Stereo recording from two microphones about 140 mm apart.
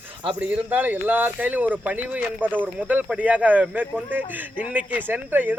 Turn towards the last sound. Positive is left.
turn(degrees=-10)  # may be behind; listen again after turning